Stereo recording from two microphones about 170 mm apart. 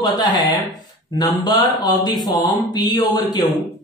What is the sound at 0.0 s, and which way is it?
A man's voice, 25° left (ahead or behind).